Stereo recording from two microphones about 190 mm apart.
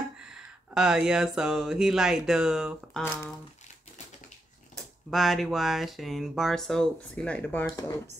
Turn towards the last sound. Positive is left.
turn(degrees=10)  # may be behind; listen again after turning